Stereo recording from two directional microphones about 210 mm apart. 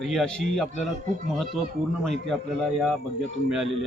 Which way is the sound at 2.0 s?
Centre (ahead or behind).